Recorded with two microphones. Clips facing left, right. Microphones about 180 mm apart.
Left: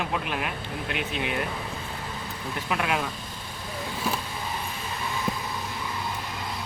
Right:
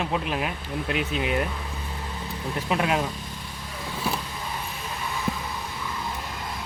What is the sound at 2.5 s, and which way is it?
Speech, 35° right (ahead or behind).